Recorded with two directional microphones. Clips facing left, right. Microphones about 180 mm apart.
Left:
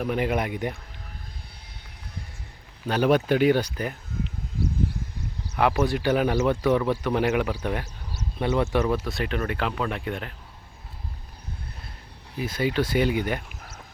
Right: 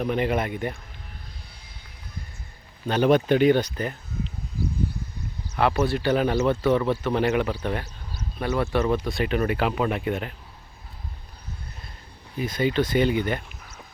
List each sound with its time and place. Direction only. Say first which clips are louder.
0.0 s speech: right 1 dB; 5° left (ahead or behind)
2.8 s speech: right 2 dB; 5° left (ahead or behind)
5.5 s speech: even; 15° left (ahead or behind)
8.4 s speech: left 1 dB; 20° left (ahead or behind)
8.9 s speech: right 2 dB; 5° left (ahead or behind)
12.4 s speech: right 2 dB; 5° left (ahead or behind)